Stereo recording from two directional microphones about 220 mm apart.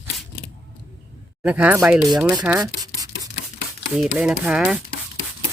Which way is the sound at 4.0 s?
5° right (ahead or behind).